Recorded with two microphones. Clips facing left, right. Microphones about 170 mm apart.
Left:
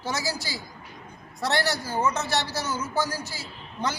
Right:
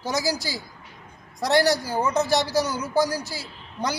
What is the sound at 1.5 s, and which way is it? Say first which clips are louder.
A man's voice: right 7 dB; 15° right (ahead or behind).